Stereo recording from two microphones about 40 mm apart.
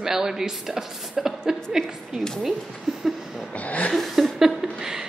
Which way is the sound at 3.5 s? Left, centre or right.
Left.